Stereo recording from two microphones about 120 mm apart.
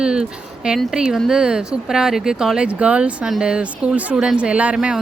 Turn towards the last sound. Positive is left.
turn(degrees=-5)  # may be behind; listen again after turning